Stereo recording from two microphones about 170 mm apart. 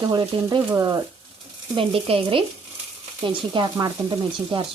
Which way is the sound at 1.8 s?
35° right (ahead or behind).